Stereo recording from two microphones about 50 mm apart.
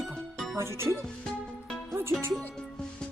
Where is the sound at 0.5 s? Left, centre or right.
Right.